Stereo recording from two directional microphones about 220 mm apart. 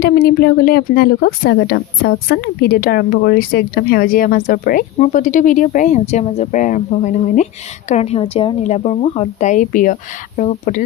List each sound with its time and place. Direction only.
0.0 s speech: 45° left (ahead or behind)